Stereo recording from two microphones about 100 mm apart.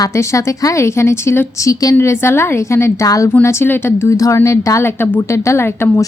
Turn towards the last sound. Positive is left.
turn(degrees=30)  # may be behind; listen again after turning